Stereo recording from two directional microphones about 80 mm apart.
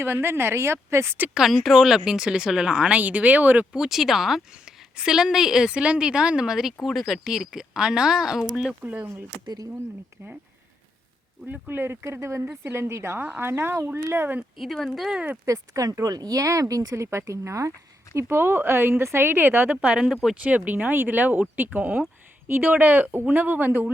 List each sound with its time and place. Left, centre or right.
0.0 s speech: right
1.3 s speech: centre; by 3.7 s right
3.7 s speech: centre
8.8 s speech: right
11.4 s speech: right
14.6 s speech: centre
15.4 s speech: right
18.2 s speech: right
19.7 s speech: centre